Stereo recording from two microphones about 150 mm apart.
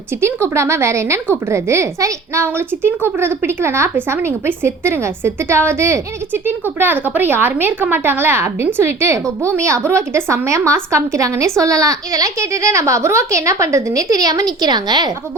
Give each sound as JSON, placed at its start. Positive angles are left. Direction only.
{"t": 0.2, "sound": "a woman's voice", "side_deg": -15}